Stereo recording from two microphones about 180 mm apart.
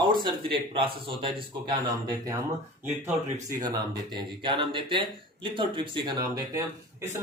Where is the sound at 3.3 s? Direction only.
20° right (ahead or behind).